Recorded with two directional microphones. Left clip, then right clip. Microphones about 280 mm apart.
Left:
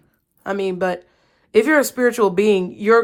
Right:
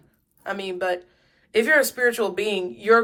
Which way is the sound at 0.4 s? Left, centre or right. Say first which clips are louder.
Left 5 dB; left.